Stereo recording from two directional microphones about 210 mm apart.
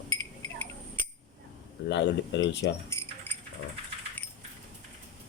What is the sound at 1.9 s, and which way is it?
Speech, 55° left (ahead or behind).